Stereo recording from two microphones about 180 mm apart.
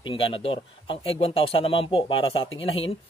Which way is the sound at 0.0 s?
30° left (ahead or behind).